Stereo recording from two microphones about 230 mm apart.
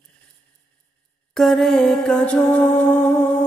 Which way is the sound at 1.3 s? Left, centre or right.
Centre.